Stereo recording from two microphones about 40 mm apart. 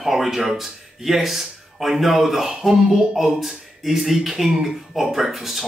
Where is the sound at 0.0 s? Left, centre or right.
Centre.